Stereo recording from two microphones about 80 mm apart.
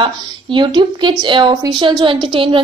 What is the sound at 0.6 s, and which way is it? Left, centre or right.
A woman's voice, right.